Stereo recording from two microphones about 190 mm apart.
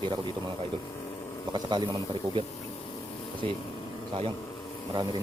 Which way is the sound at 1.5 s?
25° right (ahead or behind).